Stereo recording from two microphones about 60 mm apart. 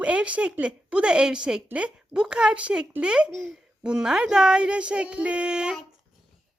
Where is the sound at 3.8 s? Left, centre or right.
Centre.